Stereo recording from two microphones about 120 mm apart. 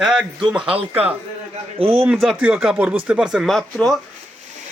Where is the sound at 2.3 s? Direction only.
10° right (ahead or behind).